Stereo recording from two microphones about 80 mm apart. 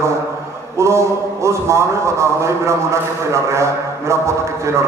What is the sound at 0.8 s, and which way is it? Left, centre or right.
A man's voice, right.